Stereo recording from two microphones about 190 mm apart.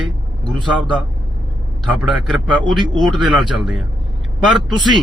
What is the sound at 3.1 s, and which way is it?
Speech, centre (ahead or behind).